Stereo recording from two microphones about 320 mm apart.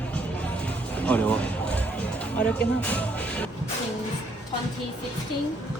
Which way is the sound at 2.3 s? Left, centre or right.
Centre.